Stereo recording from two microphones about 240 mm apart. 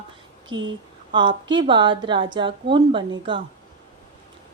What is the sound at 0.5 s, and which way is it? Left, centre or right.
Speech, right.